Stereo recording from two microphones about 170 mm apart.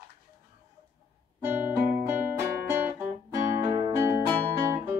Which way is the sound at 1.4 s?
10° right (ahead or behind).